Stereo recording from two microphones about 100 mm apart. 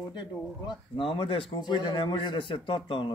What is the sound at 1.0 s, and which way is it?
A man's voice, 65° left (ahead or behind).